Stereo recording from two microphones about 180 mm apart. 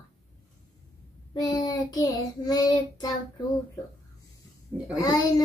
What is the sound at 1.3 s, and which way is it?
Child singing, 20° left (ahead or behind).